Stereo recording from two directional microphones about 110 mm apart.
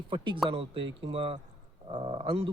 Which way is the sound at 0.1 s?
50° right (ahead or behind).